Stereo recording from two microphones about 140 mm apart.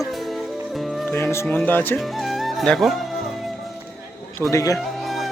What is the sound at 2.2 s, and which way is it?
Music, centre (ahead or behind).